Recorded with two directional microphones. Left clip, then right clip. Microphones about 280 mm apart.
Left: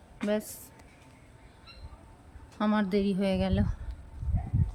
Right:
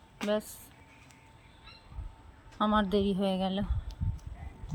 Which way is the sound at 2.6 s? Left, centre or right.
Centre.